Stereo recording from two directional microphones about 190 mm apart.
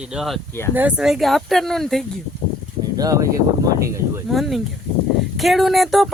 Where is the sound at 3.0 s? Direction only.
20° right (ahead or behind).